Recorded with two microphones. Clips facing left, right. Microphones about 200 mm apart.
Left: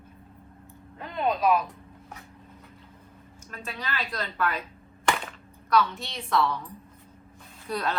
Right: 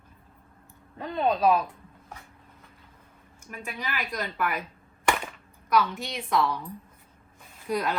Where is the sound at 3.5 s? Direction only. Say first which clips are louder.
Even; 15° right (ahead or behind).